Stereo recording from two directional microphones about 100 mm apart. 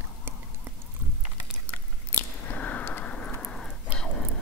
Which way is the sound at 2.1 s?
20° left (ahead or behind).